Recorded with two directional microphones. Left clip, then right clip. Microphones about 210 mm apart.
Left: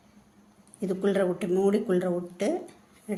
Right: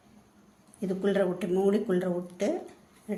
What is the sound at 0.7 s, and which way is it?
Speech, 20° left (ahead or behind).